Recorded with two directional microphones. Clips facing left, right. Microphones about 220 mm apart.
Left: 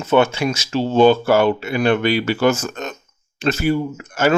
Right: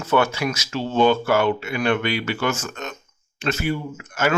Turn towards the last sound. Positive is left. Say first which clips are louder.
# left 5 dB
turn(degrees=30)  # may be behind; listen again after turning